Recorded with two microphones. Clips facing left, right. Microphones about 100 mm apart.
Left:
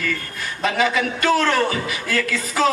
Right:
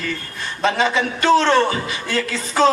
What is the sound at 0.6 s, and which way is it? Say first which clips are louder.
A man's voice: right 2 dB; 30° right (ahead or behind).